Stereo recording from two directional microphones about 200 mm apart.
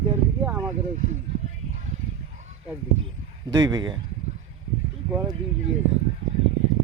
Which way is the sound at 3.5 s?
20° right (ahead or behind).